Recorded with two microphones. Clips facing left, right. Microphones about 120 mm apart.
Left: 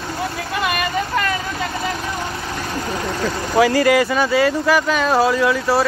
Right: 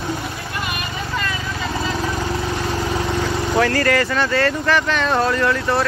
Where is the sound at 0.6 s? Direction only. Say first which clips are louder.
Left 7 dB; 65° left (ahead or behind).